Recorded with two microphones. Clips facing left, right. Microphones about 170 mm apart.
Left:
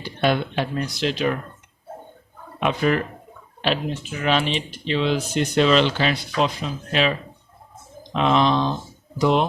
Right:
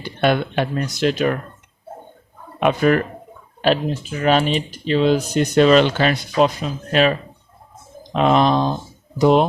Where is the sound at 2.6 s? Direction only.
50° right (ahead or behind).